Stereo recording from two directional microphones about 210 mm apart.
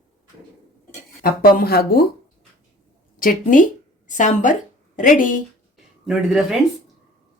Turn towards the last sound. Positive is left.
turn(degrees=0)  # may be behind; listen again after turning